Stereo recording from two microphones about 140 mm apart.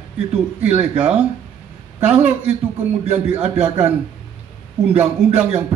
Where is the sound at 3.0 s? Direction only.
50° right (ahead or behind).